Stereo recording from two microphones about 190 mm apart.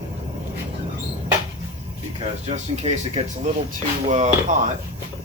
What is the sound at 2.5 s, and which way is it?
Speech, 35° right (ahead or behind).